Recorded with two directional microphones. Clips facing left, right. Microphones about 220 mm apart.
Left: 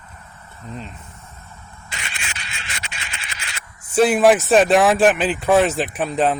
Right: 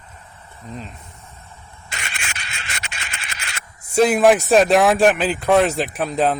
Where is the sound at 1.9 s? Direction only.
45° right (ahead or behind).